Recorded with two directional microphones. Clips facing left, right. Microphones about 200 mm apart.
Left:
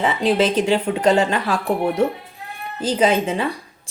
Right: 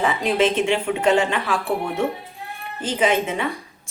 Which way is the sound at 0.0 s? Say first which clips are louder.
Left 2 dB; 30° left (ahead or behind).